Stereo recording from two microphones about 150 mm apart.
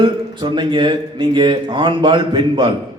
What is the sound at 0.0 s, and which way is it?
Speech, 30° right (ahead or behind).